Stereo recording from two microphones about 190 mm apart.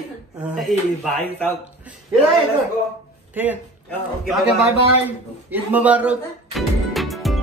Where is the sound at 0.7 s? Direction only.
Centre (ahead or behind).